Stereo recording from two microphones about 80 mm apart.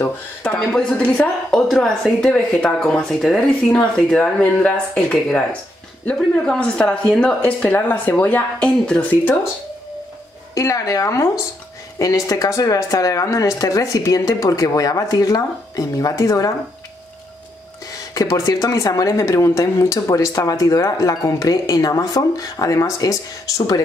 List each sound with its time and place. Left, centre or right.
0.4 s speech: centre
1.0 s a woman's voice: centre
1.5 s a woman's voice: centre
6.0 s speech: centre
10.5 s speech: left
18.1 s speech: left